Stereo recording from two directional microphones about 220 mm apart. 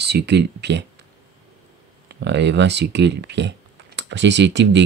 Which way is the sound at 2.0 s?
50° right (ahead or behind).